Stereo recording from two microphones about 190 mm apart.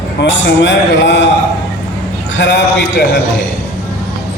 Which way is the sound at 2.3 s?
70° left (ahead or behind).